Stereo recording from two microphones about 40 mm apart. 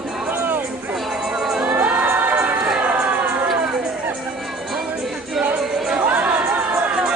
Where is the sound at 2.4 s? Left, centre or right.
Right.